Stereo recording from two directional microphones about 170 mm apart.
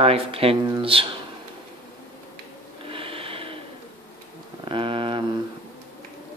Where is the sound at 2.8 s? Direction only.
30° right (ahead or behind).